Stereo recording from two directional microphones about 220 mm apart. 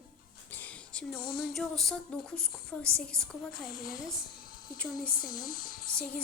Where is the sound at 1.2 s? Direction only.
45° left (ahead or behind).